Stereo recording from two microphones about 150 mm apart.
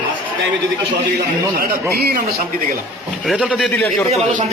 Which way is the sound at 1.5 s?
90° right.